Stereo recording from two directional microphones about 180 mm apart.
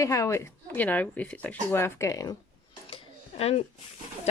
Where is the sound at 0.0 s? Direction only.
15° left (ahead or behind).